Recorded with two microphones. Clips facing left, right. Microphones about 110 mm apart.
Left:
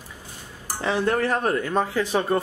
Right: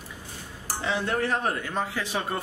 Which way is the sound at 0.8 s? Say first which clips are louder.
Left 5 dB; 50° left (ahead or behind).